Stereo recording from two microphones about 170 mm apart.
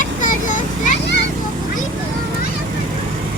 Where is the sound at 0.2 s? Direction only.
50° left (ahead or behind).